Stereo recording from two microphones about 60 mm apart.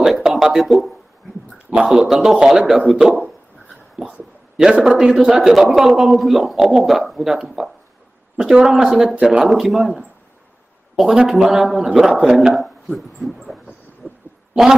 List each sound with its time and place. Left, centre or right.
0.0 s a man's voice: centre
9.4 s a man's voice: centre
14.0 s owl: centre
14.5 s speech: centre